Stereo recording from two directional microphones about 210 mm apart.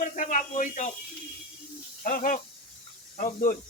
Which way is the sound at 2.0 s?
40° left (ahead or behind).